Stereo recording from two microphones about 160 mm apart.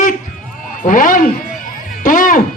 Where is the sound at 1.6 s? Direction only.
55° left (ahead or behind).